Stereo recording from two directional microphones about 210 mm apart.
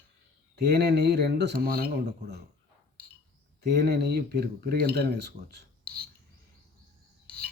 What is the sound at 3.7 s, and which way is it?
Speech, 50° right (ahead or behind).